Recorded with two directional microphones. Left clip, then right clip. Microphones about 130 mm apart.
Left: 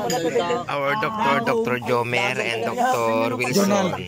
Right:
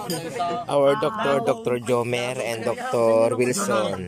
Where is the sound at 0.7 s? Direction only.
35° right (ahead or behind).